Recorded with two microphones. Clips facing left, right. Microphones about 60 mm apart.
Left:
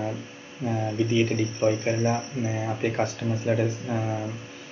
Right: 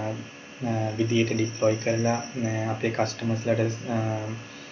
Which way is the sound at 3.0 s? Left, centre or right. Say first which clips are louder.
Even; centre.